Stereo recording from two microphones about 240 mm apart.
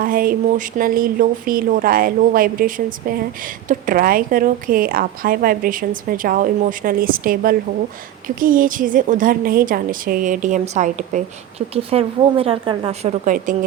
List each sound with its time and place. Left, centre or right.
0.0 s a woman's voice: right